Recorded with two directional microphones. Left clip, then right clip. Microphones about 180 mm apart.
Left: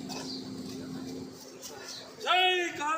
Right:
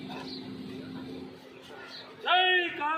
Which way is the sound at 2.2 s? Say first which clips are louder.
Right 2 dB; 20° left (ahead or behind).